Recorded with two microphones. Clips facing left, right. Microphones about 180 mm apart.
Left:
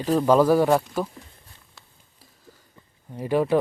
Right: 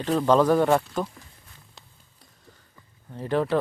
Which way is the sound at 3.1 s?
10° left (ahead or behind).